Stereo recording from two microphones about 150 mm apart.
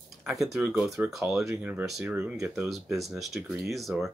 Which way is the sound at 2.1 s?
20° right (ahead or behind).